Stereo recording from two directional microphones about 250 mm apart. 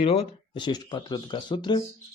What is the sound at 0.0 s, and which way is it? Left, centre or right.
Speech, left.